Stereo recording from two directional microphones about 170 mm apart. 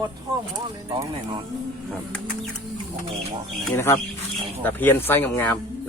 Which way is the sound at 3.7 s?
15° left (ahead or behind).